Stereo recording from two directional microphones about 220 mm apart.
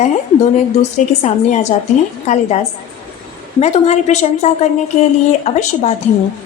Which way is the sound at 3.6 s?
30° left (ahead or behind).